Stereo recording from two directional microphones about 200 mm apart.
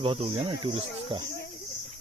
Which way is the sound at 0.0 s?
30° right (ahead or behind).